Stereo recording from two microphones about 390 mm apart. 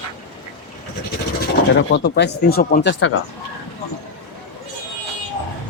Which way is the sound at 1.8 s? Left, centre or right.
Left.